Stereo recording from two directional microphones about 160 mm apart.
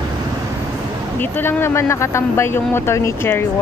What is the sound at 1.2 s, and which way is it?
Speech, 15° left (ahead or behind).